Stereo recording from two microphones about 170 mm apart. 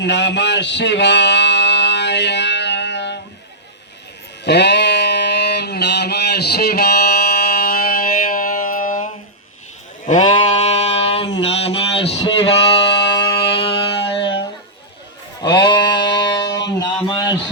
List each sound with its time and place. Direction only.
0.0 s music: 90° left
4.4 s a sound: 85° left; by 9.0 s 50° left (ahead or behind)
10.1 s sheep: 35° left (ahead or behind)
12.9 s music: 90° left
13.1 s music: 30° left (ahead or behind)
15.7 s sheep: 25° left (ahead or behind)
16.5 s a sound: 25° left (ahead or behind)